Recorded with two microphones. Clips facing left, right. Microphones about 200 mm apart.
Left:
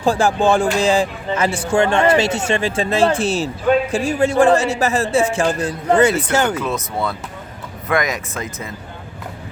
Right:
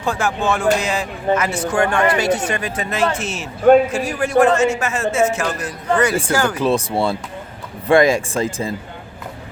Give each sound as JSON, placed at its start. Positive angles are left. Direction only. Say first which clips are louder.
{"t": 0.0, "sound": "a man's voice", "louder": "left 5 dB", "side_deg": 30}
{"t": 6.6, "sound": "speech", "louder": "right 5 dB", "side_deg": -30}